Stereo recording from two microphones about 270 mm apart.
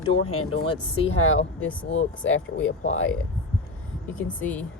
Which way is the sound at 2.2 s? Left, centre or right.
Left.